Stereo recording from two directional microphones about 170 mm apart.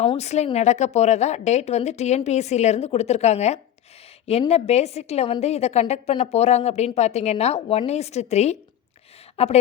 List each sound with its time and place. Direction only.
0.0 s a woman's voice: 40° left (ahead or behind)